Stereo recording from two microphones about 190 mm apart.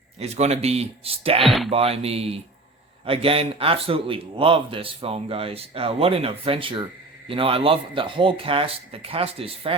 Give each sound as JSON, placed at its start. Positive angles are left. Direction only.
{"t": 0.2, "sound": "speech", "side_deg": -35}
{"t": 1.4, "sound": "speech", "side_deg": 0}
{"t": 1.7, "sound": "a man's voice", "side_deg": -30}